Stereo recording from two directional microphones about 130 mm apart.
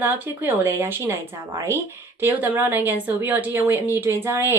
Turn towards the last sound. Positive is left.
turn(degrees=-20)  # may be behind; listen again after turning